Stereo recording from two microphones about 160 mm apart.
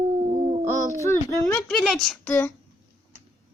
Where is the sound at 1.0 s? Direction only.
15° left (ahead or behind).